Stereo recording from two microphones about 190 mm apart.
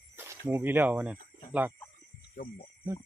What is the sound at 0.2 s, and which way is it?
Speech, 10° right (ahead or behind).